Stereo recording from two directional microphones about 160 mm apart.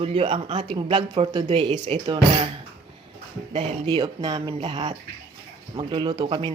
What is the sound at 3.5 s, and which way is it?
Speech, 40° right (ahead or behind).